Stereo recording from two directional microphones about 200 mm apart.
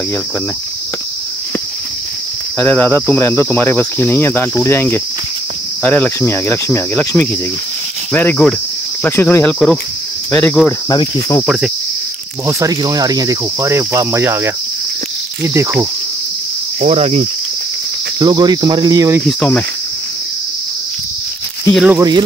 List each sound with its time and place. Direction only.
2.6 s cricket: 10° left (ahead or behind)
10.9 s cricket: 15° left (ahead or behind)
12.4 s speech: 15° right (ahead or behind)
16.8 s speech: 30° right (ahead or behind)
18.2 s cricket: 20° right (ahead or behind)
19.2 s cricket: 5° left (ahead or behind)
21.7 s speech: 5° right (ahead or behind)